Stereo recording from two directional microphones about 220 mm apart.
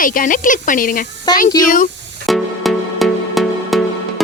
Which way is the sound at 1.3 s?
20° left (ahead or behind).